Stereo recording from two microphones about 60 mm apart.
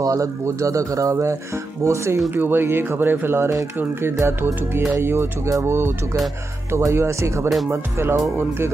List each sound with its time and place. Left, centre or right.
0.0 s speech: right
2.3 s speech: right
7.7 s speech: right